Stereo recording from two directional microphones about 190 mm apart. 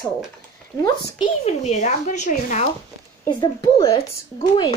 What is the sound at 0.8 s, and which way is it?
Speech, 25° left (ahead or behind).